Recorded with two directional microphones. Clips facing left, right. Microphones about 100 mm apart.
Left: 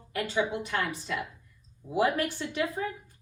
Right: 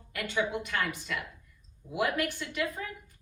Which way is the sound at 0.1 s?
25° left (ahead or behind).